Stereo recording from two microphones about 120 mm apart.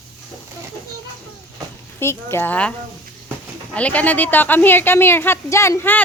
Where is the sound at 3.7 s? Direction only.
10° left (ahead or behind).